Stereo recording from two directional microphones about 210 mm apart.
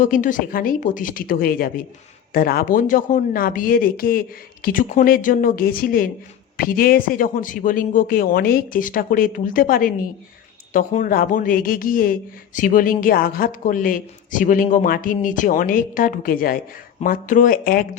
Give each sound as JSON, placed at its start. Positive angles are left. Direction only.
{"t": 0.0, "sound": "speech", "side_deg": 40}